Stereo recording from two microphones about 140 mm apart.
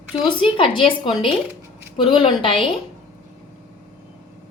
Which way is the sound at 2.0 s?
35° left (ahead or behind).